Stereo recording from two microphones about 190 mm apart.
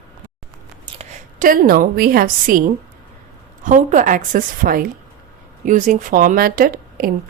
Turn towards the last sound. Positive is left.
turn(degrees=-50)  # may be behind; listen again after turning